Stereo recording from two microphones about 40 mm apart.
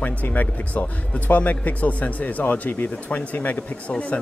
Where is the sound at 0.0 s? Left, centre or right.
Left.